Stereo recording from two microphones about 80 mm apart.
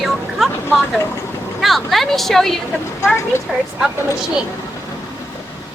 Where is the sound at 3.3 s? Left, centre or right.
Left.